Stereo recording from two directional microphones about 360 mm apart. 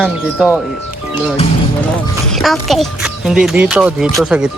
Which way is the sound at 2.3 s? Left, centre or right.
Centre.